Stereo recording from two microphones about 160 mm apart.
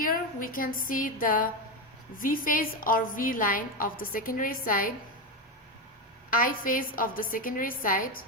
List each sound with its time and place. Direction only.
0.0 s a woman's voice: 60° left (ahead or behind)
6.3 s a woman's voice: 60° left (ahead or behind)